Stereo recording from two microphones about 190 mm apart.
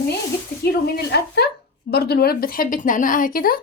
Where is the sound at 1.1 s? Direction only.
60° left (ahead or behind).